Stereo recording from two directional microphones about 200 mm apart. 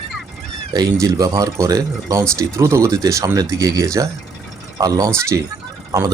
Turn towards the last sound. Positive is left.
turn(degrees=-20)  # may be behind; listen again after turning